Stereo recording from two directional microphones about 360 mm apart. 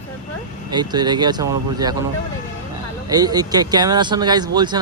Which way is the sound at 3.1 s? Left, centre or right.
Centre.